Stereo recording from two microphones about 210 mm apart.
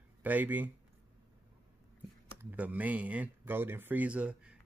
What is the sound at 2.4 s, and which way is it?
Speech, 10° right (ahead or behind).